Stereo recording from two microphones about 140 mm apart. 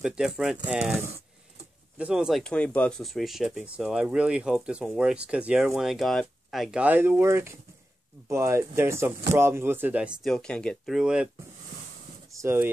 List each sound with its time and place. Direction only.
0.0 s speech: 5° right (ahead or behind)
10.3 s speech: 5° left (ahead or behind)
12.4 s speech: 15° right (ahead or behind)